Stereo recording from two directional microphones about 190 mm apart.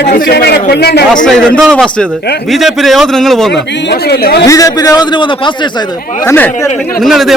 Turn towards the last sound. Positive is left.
turn(degrees=0)  # may be behind; listen again after turning